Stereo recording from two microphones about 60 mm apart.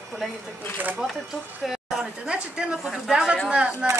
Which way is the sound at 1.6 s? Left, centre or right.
Centre.